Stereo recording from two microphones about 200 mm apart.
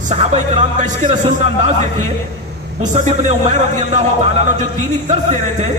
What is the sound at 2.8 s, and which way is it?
A man's voice, 35° right (ahead or behind).